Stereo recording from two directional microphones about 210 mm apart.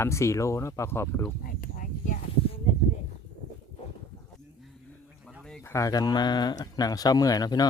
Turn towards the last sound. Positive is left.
turn(degrees=20)  # may be behind; listen again after turning